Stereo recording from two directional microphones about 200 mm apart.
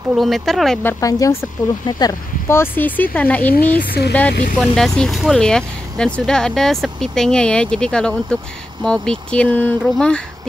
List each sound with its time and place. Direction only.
0.1 s speech: centre (ahead or behind)
1.0 s speech: 15° left (ahead or behind)
3.8 s speech: 50° left (ahead or behind)
4.6 s speech: centre (ahead or behind)